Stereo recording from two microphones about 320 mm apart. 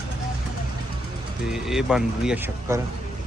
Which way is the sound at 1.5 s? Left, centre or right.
Centre.